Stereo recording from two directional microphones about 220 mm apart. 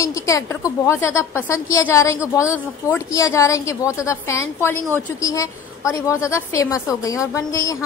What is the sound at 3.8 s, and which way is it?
Speech, 5° right (ahead or behind).